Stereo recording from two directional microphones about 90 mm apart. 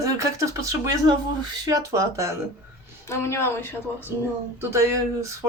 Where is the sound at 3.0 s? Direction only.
30° left (ahead or behind).